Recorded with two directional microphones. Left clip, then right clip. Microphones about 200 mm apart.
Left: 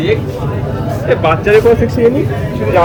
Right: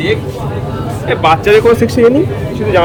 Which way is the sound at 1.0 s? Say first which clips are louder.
Right 2 dB; 65° right (ahead or behind).